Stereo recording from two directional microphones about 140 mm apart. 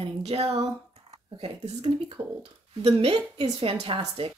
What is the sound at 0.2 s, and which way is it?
A woman's voice, 50° right (ahead or behind).